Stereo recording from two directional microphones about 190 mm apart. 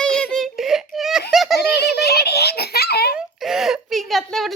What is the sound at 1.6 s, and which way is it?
Giggle, 60° left (ahead or behind).